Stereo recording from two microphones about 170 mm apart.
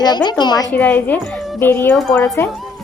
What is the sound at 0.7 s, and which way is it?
A woman's voice, 10° left (ahead or behind).